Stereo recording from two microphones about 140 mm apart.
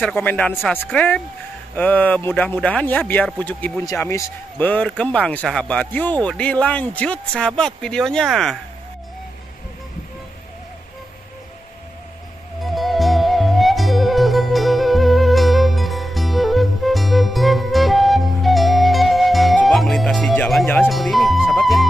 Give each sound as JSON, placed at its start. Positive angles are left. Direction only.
{"t": 0.0, "sound": "speech", "side_deg": 10}
{"t": 0.6, "sound": "speech", "side_deg": 0}
{"t": 0.9, "sound": "speech", "side_deg": 10}
{"t": 12.6, "sound": "music", "side_deg": 0}